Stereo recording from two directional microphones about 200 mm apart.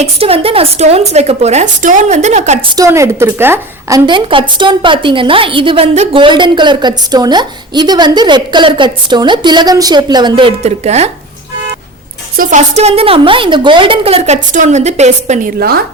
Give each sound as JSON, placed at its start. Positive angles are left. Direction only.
{"t": 0.0, "sound": "a woman's voice", "side_deg": -30}
{"t": 2.7, "sound": "a woman's voice", "side_deg": -15}
{"t": 12.4, "sound": "a woman's voice", "side_deg": -35}
{"t": 15.5, "sound": "a woman's voice", "side_deg": -50}